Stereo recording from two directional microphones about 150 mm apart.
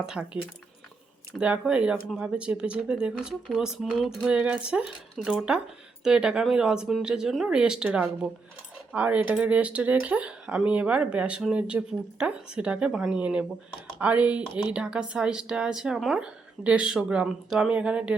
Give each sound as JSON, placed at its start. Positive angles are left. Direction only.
{"t": 0.0, "sound": "speech", "side_deg": -5}
{"t": 1.4, "sound": "speech", "side_deg": -5}